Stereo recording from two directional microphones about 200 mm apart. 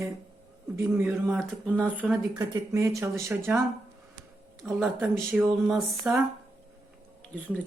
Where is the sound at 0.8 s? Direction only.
10° right (ahead or behind).